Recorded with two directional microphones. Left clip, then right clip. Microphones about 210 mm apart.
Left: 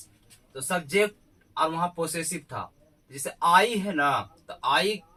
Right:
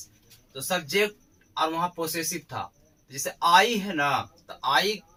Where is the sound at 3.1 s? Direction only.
20° left (ahead or behind).